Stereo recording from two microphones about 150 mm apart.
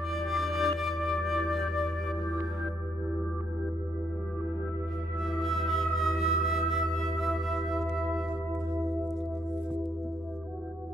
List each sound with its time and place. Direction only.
0.1 s flute: centre (ahead or behind)
5.2 s music: centre (ahead or behind)